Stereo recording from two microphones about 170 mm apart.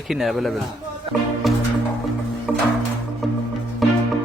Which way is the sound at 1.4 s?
Centre (ahead or behind).